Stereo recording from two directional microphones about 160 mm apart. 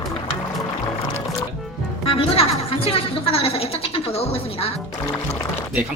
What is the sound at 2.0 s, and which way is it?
A woman's voice, 35° left (ahead or behind).